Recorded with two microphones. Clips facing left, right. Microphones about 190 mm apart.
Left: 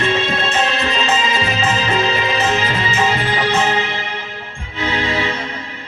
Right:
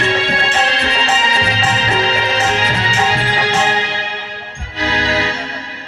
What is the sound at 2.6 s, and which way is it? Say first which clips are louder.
Music: even; 90° right.